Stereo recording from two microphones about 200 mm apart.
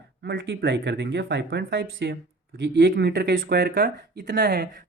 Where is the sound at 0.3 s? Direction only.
60° right (ahead or behind).